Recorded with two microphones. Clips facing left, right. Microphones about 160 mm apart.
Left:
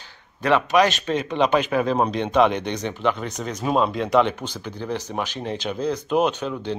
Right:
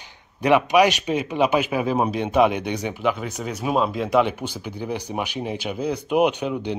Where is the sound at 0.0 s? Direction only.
15° right (ahead or behind).